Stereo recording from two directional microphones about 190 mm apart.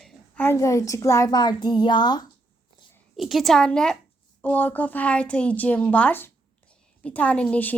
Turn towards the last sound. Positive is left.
turn(degrees=10)  # may be behind; listen again after turning